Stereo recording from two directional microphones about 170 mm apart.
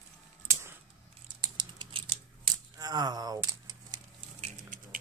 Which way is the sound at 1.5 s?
25° right (ahead or behind).